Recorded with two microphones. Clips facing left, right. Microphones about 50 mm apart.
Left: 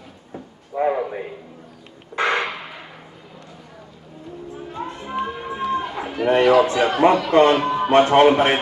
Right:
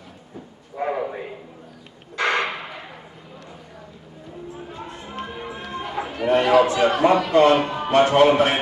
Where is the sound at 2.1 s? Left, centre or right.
Left.